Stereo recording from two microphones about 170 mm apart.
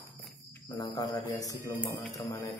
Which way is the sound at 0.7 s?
25° left (ahead or behind).